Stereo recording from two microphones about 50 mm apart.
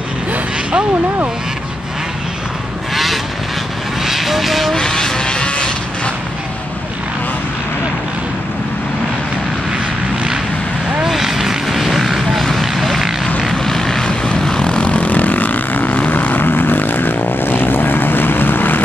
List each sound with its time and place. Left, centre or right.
0.3 s a sound: right
2.9 s vehicle: centre
4.7 s vehicle: centre
11.0 s vehicle: centre; by 18.8 s left